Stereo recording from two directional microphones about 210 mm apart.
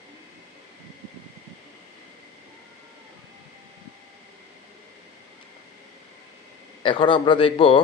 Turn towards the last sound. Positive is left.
turn(degrees=25)  # may be behind; listen again after turning